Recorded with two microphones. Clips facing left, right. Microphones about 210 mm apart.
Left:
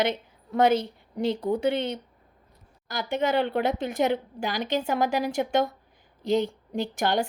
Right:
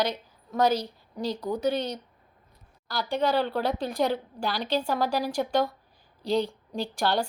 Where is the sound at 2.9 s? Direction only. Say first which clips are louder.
Even; 20° left (ahead or behind).